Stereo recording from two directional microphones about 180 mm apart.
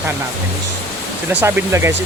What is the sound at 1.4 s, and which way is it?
Speech, 15° right (ahead or behind).